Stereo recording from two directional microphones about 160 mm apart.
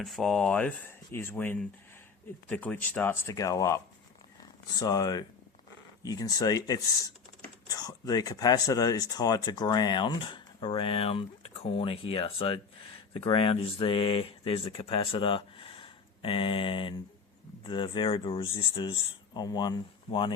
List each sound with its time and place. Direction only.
0.0 s speech: centre (ahead or behind); by 3.8 s 20° left (ahead or behind)
4.8 s speech: 25° left (ahead or behind)